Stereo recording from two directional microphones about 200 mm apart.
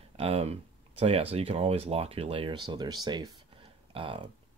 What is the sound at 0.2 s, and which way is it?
Speech, 30° right (ahead or behind).